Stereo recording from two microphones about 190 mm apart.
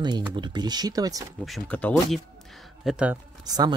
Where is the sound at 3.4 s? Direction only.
20° right (ahead or behind).